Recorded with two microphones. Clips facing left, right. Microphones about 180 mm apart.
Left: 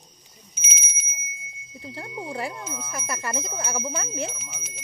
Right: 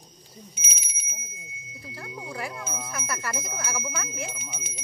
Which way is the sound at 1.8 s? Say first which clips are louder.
Left 4 dB; 25° left (ahead or behind).